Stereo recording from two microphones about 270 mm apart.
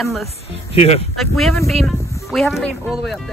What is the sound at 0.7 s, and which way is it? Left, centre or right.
Speech, left.